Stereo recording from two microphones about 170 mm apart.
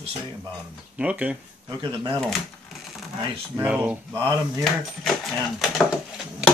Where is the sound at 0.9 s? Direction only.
10° right (ahead or behind).